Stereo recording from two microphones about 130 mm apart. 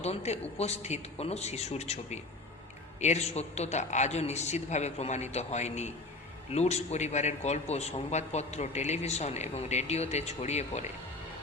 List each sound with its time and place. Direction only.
0.0 s a man's voice: 55° left (ahead or behind)